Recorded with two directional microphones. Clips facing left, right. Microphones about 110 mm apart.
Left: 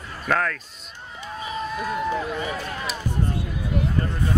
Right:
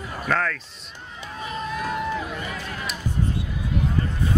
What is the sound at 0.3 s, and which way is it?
Speech, 5° left (ahead or behind).